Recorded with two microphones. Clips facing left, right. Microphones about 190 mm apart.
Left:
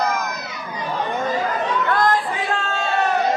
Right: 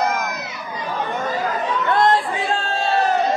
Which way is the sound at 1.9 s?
25° right (ahead or behind).